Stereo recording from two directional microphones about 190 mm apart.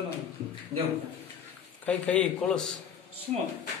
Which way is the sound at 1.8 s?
5° left (ahead or behind).